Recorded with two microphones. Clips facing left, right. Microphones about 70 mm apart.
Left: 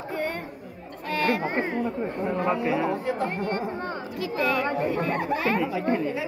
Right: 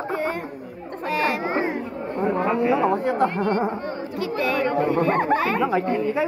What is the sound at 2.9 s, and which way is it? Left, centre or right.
Speech, right.